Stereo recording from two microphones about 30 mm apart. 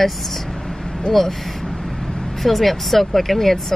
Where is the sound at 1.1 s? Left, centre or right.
Left.